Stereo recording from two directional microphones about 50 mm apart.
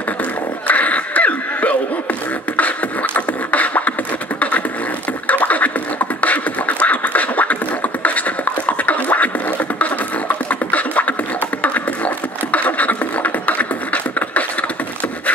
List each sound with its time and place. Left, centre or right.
0.7 s a sound: left
2.5 s beatboxing: left
4.4 s a sound: left
5.2 s scratching: left
6.2 s beatboxing: left
10.5 s beatboxing: left